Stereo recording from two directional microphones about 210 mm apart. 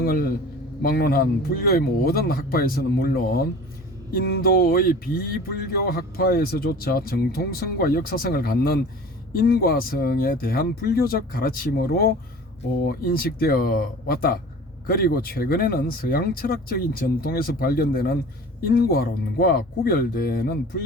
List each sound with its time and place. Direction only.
0.0 s speech: 45° left (ahead or behind)